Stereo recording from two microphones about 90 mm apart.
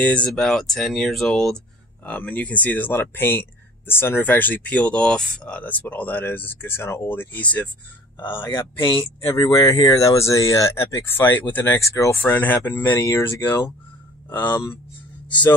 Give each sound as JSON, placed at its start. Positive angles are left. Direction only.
{"t": 0.0, "sound": "speech", "side_deg": 15}
{"t": 2.0, "sound": "speech", "side_deg": 15}
{"t": 8.8, "sound": "speech", "side_deg": 70}
{"t": 9.3, "sound": "speech", "side_deg": 45}